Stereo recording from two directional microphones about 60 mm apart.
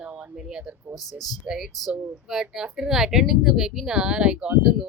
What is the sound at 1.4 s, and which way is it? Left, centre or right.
A woman's voice, centre.